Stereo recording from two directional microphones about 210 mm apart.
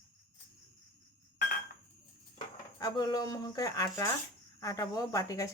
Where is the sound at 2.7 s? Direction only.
20° left (ahead or behind).